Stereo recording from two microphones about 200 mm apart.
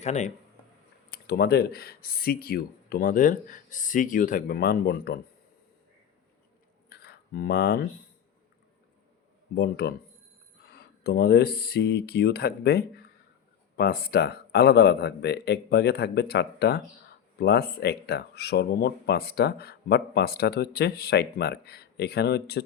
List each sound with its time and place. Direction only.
0.0 s speech: 35° left (ahead or behind)
1.1 s speech: 55° left (ahead or behind)
6.9 s a sound: 50° left (ahead or behind)
9.6 s speech: 55° left (ahead or behind)